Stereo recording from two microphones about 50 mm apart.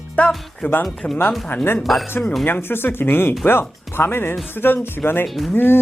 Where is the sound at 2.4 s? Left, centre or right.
Left.